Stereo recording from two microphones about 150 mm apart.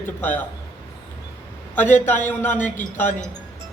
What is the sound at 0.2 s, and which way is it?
Speech, 10° left (ahead or behind).